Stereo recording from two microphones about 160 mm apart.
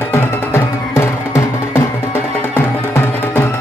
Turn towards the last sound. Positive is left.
turn(degrees=15)  # may be behind; listen again after turning